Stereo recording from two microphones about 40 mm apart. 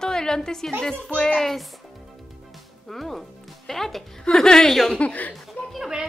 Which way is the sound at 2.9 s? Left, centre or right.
Centre.